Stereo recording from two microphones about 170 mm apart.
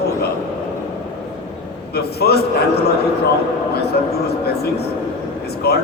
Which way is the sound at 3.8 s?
70° left (ahead or behind).